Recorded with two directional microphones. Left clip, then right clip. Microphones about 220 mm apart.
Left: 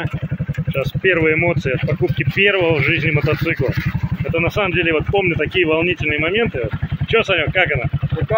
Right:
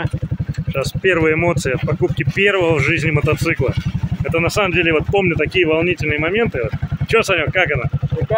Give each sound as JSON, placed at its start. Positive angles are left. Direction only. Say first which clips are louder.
{"t": 0.7, "sound": "speech", "louder": "even", "side_deg": -15}